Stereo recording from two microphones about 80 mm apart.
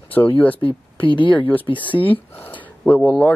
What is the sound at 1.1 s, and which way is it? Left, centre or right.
Speech, left.